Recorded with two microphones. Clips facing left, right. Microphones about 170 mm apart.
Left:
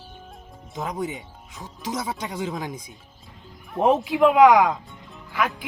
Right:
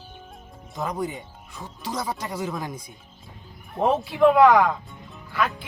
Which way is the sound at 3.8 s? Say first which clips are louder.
Left 1 dB; 20° left (ahead or behind).